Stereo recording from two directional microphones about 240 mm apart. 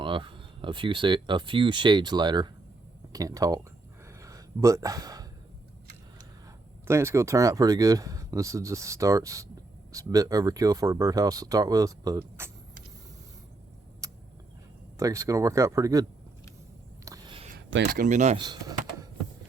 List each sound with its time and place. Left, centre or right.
0.0 s speech: centre
4.2 s a sound: centre
6.8 s speech: centre
14.0 s vehicle: centre
14.9 s speech: centre
17.1 s a sound: right
17.9 s speech: right
18.4 s power windows: centre